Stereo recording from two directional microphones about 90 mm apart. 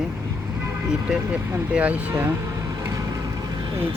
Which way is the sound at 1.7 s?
15° right (ahead or behind).